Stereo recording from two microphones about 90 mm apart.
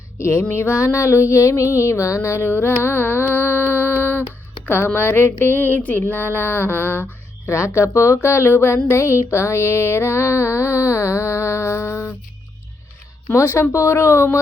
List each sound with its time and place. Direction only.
0.2 s music: 30° left (ahead or behind)
0.5 s speech: 30° left (ahead or behind)
4.3 s a sound: 20° left (ahead or behind)
4.9 s speech: 25° left (ahead or behind)
13.2 s speech: 25° left (ahead or behind)